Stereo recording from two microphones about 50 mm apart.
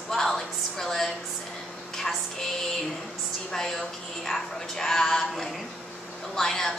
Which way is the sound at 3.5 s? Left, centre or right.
Centre.